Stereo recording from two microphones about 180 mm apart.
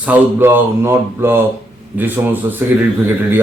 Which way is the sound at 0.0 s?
10° right (ahead or behind).